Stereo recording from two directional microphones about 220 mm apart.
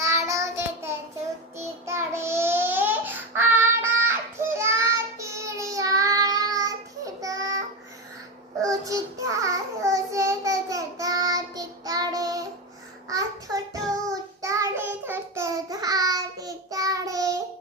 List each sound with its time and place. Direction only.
0.0 s child singing: 15° right (ahead or behind)
8.6 s child singing: 15° right (ahead or behind)